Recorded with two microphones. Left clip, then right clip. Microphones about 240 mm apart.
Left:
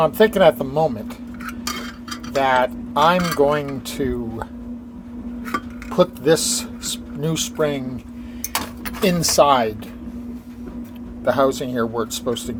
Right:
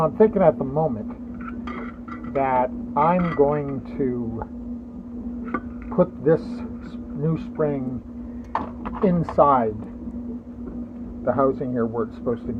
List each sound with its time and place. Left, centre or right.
0.0 s speech: left
2.3 s speech: left
5.5 s dishes: left
7.3 s speech: left
8.5 s a sound: left
9.3 s speech: left
11.3 s speech: left